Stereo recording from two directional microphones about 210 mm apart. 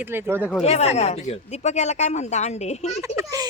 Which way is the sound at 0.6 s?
30° left (ahead or behind).